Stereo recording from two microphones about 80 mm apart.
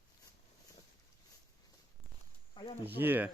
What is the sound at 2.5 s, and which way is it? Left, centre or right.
Snake, left.